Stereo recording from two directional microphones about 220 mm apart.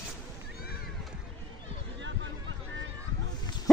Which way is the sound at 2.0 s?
55° right (ahead or behind).